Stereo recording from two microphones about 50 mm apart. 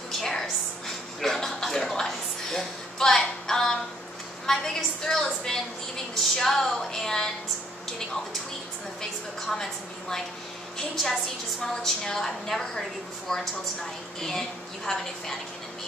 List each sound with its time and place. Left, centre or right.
0.2 s a sound: centre
4.5 s a woman's voice: centre
9.5 s a woman's voice: centre
14.9 s a woman's voice: centre